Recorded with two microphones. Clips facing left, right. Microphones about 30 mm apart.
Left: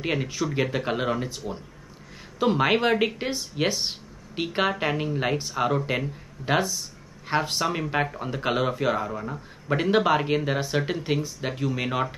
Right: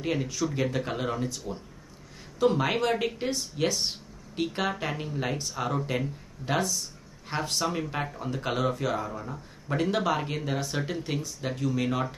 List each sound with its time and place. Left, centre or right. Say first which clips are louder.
0.0 s speech: left 2 dB; left